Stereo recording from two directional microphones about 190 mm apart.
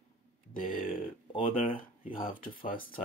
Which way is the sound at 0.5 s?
45° left (ahead or behind).